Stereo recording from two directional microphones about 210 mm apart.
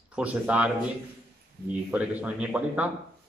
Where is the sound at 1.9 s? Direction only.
5° right (ahead or behind).